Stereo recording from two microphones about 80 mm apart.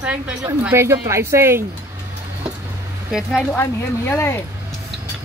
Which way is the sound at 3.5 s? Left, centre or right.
Left.